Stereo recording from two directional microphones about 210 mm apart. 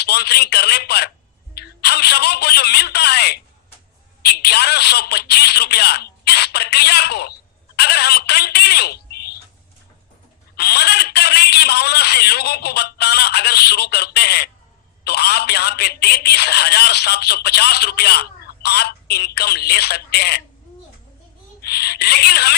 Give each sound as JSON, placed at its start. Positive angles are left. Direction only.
{"t": 0.0, "sound": "speech", "side_deg": 50}
{"t": 10.5, "sound": "speech", "side_deg": 50}
{"t": 21.6, "sound": "speech", "side_deg": 50}